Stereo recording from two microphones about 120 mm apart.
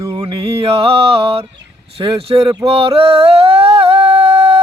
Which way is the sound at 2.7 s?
50° right (ahead or behind).